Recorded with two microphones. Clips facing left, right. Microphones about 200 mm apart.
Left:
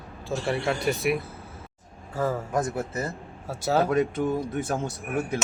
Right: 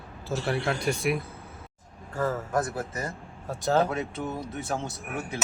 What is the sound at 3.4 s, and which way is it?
Speech, 10° left (ahead or behind).